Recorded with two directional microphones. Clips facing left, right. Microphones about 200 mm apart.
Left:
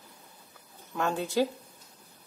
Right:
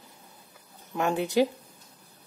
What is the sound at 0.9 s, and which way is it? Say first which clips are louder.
Speech: right 3 dB; 15° right (ahead or behind).